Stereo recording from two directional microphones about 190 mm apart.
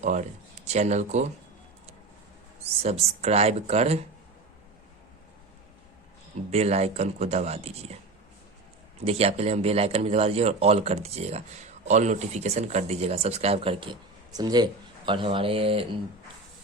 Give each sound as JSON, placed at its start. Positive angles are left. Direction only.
{"t": 0.0, "sound": "speech", "side_deg": -40}
{"t": 2.6, "sound": "speech", "side_deg": -35}
{"t": 6.5, "sound": "speech", "side_deg": -35}
{"t": 9.0, "sound": "speech", "side_deg": -30}